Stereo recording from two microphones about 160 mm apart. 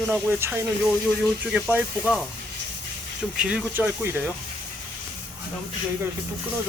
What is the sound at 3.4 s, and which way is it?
Speech, 5° right (ahead or behind).